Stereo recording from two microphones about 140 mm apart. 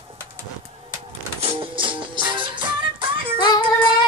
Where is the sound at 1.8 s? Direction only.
35° right (ahead or behind).